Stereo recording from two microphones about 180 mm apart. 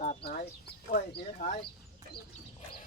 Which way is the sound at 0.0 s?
40° left (ahead or behind).